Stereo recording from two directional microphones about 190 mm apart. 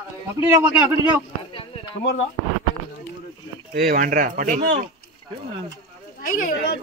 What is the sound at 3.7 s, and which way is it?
Speech, 50° right (ahead or behind).